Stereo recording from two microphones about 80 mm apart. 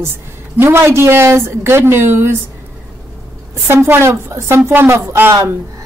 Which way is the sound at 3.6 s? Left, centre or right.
Right.